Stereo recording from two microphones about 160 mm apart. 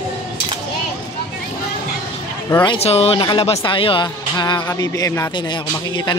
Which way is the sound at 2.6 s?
40° left (ahead or behind).